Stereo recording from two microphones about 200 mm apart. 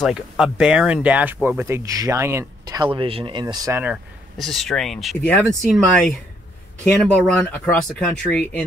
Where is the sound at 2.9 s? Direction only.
25° right (ahead or behind).